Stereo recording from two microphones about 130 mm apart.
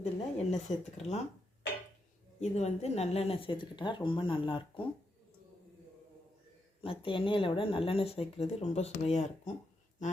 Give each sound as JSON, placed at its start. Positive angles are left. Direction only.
{"t": 0.0, "sound": "speech", "side_deg": 55}
{"t": 2.4, "sound": "speech", "side_deg": 60}
{"t": 6.8, "sound": "speech", "side_deg": 45}